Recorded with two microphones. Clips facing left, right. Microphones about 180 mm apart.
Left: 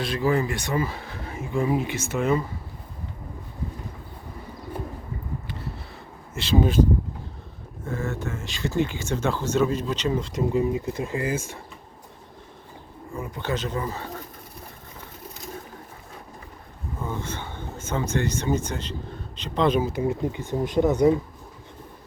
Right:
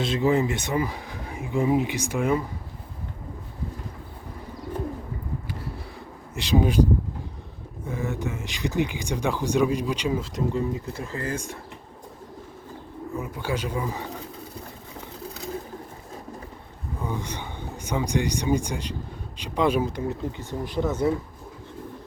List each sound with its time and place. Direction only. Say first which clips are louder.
0.0 s speech: right 2 dB; 20° right (ahead or behind)
6.3 s speech: even; 15° right (ahead or behind)
7.9 s speech: even; 15° right (ahead or behind)
10.5 s speech: left 4 dB; 15° left (ahead or behind)
13.1 s speech: left 1 dB; 5° right (ahead or behind)
17.0 s speech: even; 15° right (ahead or behind)
19.8 s speech: left 3 dB; 10° left (ahead or behind)